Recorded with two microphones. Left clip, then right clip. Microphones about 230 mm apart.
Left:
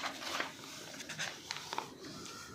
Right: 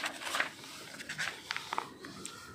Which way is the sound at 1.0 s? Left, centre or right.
Right.